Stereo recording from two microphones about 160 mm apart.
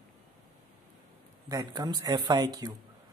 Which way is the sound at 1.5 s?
25° right (ahead or behind).